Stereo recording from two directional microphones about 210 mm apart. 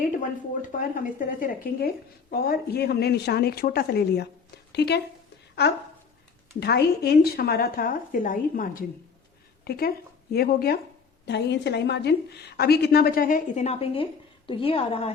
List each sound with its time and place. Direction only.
0.7 s a woman's voice: 40° left (ahead or behind)
6.6 s a woman's voice: 50° left (ahead or behind); by 15.1 s 25° left (ahead or behind)